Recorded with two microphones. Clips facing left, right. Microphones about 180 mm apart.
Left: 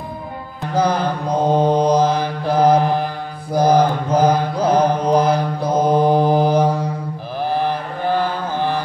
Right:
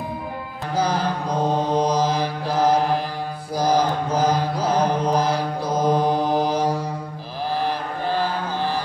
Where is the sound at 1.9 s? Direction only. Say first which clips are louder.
Left 5 dB; 55° left (ahead or behind).